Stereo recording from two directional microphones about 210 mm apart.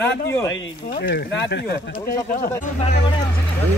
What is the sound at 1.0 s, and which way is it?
Speech, 60° left (ahead or behind).